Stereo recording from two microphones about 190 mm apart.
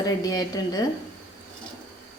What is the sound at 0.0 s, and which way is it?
Speech, 20° left (ahead or behind).